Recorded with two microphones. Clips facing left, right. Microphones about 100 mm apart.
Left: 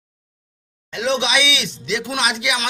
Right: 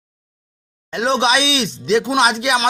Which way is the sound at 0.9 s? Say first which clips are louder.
Right 4 dB; 40° right (ahead or behind).